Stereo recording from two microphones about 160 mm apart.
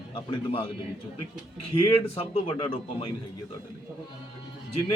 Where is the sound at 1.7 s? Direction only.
35° left (ahead or behind).